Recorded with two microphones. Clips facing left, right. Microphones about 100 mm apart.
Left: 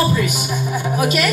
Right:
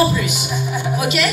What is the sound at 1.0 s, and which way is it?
Speech, 40° left (ahead or behind).